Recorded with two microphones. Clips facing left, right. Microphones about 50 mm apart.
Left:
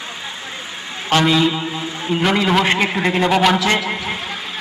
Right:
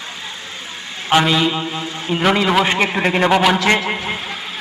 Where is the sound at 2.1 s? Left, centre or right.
Centre.